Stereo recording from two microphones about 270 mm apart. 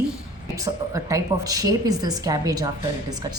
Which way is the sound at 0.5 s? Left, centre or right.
Centre.